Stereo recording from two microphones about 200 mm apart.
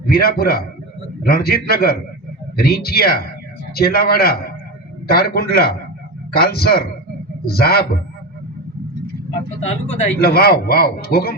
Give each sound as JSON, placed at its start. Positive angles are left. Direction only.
{"t": 0.0, "sound": "a man's voice", "side_deg": 50}
{"t": 9.6, "sound": "speech", "side_deg": 35}
{"t": 10.2, "sound": "a man's voice", "side_deg": 50}